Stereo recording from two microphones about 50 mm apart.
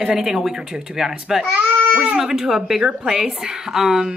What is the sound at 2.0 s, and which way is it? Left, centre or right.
Speech, centre.